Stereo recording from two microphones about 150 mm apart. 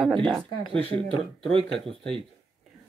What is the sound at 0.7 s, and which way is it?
Speech, 35° right (ahead or behind).